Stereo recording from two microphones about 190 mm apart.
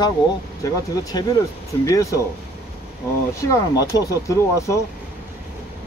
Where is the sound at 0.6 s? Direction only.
20° left (ahead or behind).